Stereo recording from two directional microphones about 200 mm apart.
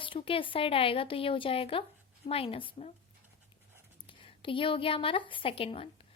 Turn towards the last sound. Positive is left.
turn(degrees=25)  # may be behind; listen again after turning